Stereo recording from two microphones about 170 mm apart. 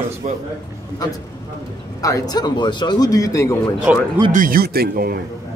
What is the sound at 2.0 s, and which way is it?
A man's voice, 20° left (ahead or behind).